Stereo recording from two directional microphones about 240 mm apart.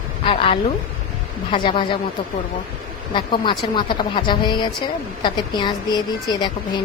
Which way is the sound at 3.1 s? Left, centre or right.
Centre.